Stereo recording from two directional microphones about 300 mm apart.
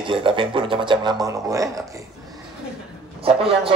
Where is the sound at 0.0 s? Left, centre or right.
Centre.